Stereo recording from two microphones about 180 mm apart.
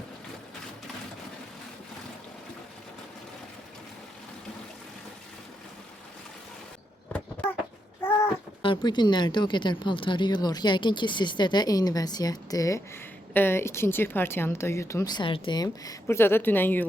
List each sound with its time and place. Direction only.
8.6 s speech: 25° left (ahead or behind); by 16.8 s 10° left (ahead or behind)